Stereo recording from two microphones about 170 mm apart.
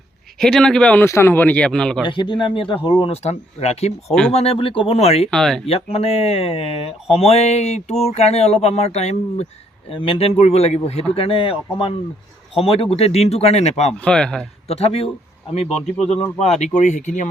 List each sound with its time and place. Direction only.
0.3 s a man's voice: 5° left (ahead or behind)
2.0 s speech: 30° left (ahead or behind)
5.3 s speech: 5° left (ahead or behind)
5.6 s speech: 35° left (ahead or behind)
13.9 s speech: 5° left (ahead or behind)
14.7 s speech: 35° left (ahead or behind)